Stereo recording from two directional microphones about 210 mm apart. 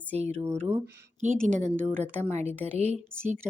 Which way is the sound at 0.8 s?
55° right (ahead or behind).